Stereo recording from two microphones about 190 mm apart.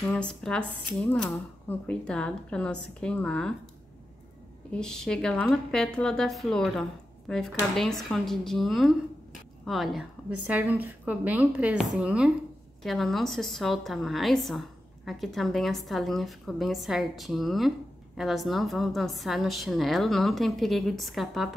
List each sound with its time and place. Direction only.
0.0 s a woman's voice: 5° left (ahead or behind)
4.6 s a woman's voice: 5° left (ahead or behind)